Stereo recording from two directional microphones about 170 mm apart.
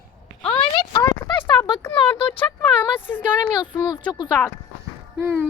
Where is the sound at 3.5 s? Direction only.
25° left (ahead or behind).